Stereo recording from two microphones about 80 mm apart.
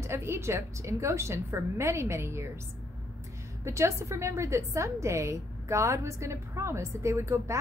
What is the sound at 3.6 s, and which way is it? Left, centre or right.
A woman's voice, right.